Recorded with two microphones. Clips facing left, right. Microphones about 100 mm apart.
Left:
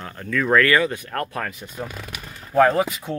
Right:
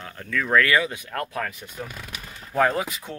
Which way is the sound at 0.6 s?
10° right (ahead or behind).